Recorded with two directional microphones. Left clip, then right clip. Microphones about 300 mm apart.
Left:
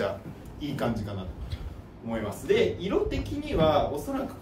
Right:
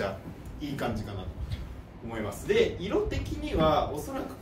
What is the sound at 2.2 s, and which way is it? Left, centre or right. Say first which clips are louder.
Speech: left 1 dB; centre.